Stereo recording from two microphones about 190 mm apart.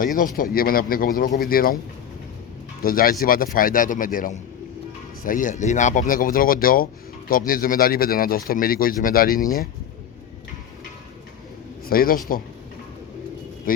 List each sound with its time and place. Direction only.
0.3 s speech: 50° left (ahead or behind)
2.8 s speech: 50° left (ahead or behind)
11.9 s speech: 50° left (ahead or behind)
13.7 s speech: 45° left (ahead or behind)